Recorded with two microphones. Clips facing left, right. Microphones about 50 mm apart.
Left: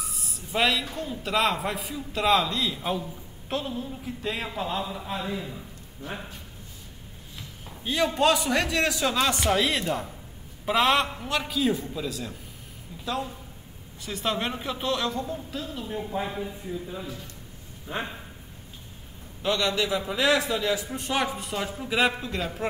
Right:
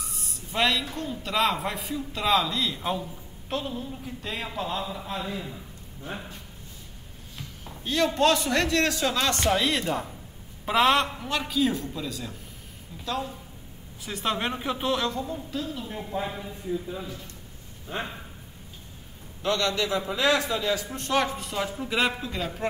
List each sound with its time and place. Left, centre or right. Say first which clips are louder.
0.0 s a sound: left 1 dB; centre
0.9 s a man's voice: left 1 dB; centre
7.6 s a man's voice: right 1 dB; centre
19.4 s a man's voice: even; centre